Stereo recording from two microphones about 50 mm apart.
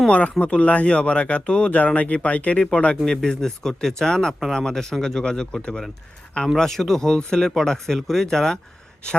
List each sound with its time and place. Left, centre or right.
0.1 s speech: left
3.2 s speech: centre